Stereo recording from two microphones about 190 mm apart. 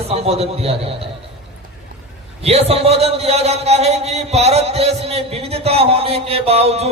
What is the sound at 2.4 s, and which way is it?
A man's voice, 35° right (ahead or behind).